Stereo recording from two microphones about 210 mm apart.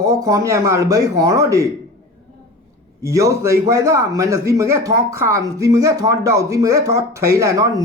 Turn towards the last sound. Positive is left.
turn(degrees=-15)  # may be behind; listen again after turning